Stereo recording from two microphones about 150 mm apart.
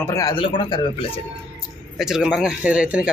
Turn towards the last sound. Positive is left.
turn(degrees=-5)  # may be behind; listen again after turning